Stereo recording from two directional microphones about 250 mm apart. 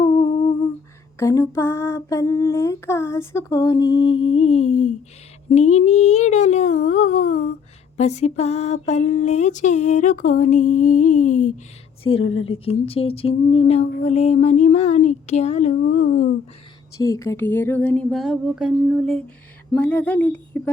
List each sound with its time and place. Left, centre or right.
0.0 s humming: centre
1.2 s female singing: centre; by 4.9 s left
5.5 s a sound: left
12.1 s a woman's voice: left
12.5 s a sound: left
17.0 s speech: centre